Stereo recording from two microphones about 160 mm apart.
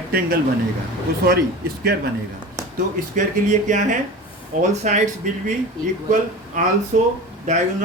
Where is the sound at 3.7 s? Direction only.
55° right (ahead or behind).